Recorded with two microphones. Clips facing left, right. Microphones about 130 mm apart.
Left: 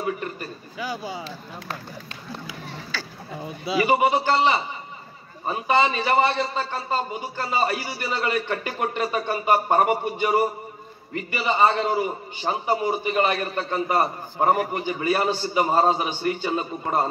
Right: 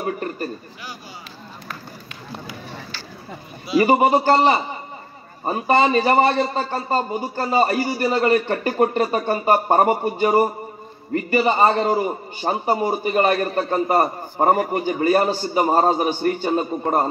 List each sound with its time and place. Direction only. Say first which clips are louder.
0.0 s a man's voice: right 3 dB; 40° right (ahead or behind)
3.8 s a man's voice: right 4 dB; 40° right (ahead or behind)